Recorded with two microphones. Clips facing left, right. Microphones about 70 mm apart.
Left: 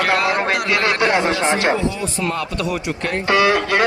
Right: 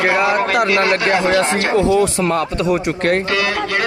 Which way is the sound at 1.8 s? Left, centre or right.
Right.